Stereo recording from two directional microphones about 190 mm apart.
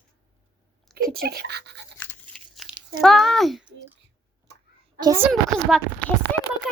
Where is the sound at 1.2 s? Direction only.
60° right (ahead or behind).